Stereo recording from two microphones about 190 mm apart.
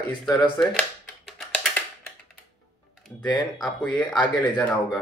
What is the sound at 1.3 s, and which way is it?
Music, centre (ahead or behind).